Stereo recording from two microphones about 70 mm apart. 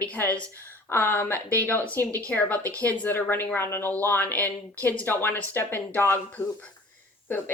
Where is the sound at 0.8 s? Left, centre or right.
Left.